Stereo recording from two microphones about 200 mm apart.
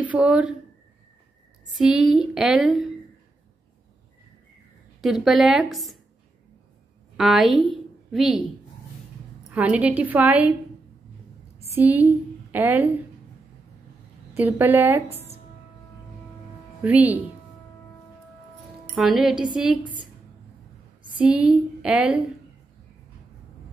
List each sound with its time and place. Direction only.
0.0 s speech: 5° right (ahead or behind)
1.7 s a woman's voice: centre (ahead or behind)
5.0 s a woman's voice: centre (ahead or behind)
7.2 s a woman's voice: centre (ahead or behind)
9.5 s a woman's voice: 5° right (ahead or behind)
11.7 s a woman's voice: 10° right (ahead or behind)
14.3 s a woman's voice: 10° right (ahead or behind)
16.8 s a woman's voice: 10° right (ahead or behind)
18.9 s a woman's voice: centre (ahead or behind)
21.2 s a woman's voice: 5° right (ahead or behind)